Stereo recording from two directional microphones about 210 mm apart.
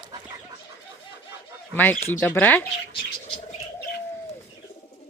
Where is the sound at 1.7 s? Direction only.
10° left (ahead or behind).